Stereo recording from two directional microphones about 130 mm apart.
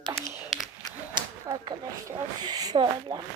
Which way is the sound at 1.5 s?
30° right (ahead or behind).